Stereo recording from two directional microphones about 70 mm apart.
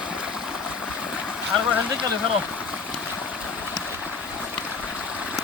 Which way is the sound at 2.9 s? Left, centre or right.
Centre.